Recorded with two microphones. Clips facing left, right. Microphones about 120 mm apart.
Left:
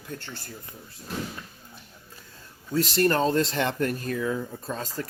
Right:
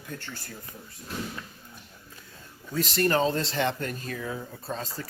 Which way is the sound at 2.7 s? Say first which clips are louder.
Left 2 dB; 45° left (ahead or behind).